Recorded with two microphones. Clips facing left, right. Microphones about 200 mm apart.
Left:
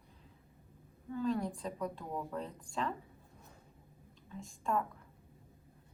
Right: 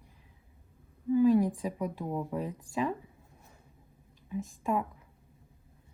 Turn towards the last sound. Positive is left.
turn(degrees=-10)  # may be behind; listen again after turning